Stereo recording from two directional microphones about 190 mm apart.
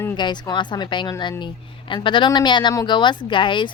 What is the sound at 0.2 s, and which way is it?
A woman's voice, 25° left (ahead or behind).